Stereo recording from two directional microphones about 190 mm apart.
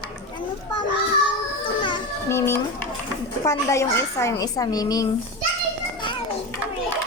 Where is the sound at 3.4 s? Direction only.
15° left (ahead or behind).